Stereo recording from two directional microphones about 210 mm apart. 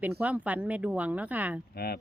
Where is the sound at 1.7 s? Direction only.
45° left (ahead or behind).